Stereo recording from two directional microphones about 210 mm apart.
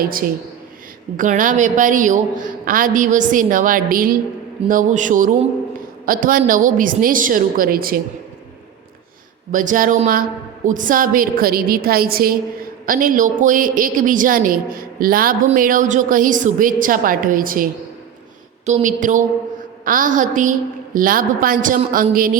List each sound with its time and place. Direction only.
1.1 s a woman's voice: 40° right (ahead or behind)
9.5 s a woman's voice: 40° right (ahead or behind)